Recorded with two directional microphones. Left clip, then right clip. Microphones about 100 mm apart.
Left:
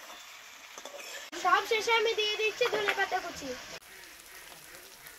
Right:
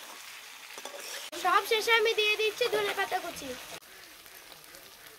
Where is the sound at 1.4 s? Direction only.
15° right (ahead or behind).